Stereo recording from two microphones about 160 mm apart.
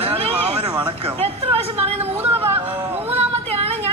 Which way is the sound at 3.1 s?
35° right (ahead or behind).